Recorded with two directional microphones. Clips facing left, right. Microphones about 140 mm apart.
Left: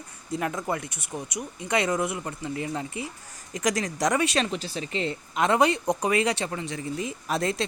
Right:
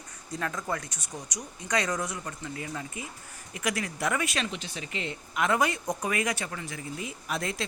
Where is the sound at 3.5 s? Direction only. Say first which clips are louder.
Left 5 dB; 40° left (ahead or behind).